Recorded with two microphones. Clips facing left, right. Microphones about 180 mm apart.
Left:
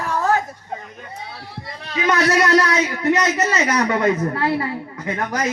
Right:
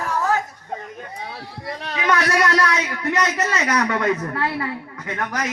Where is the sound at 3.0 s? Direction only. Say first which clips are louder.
Left 3 dB; 25° left (ahead or behind).